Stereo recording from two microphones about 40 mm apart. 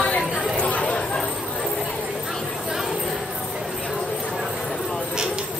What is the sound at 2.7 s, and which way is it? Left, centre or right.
Clip-clop, centre.